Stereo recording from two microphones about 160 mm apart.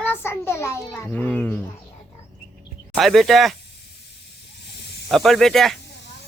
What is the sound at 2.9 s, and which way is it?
Speech, centre (ahead or behind).